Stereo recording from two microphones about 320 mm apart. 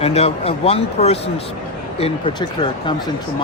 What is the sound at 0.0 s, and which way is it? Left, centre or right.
Speech, centre.